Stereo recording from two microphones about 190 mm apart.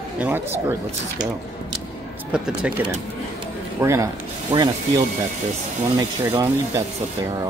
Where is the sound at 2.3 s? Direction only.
5° right (ahead or behind).